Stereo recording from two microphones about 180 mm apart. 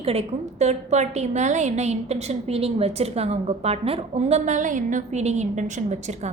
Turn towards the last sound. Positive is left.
turn(degrees=-40)  # may be behind; listen again after turning